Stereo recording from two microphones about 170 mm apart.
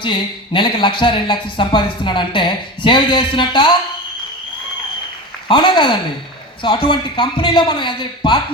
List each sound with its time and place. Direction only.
0.0 s speech: 30° left (ahead or behind)
5.5 s speech: 30° left (ahead or behind)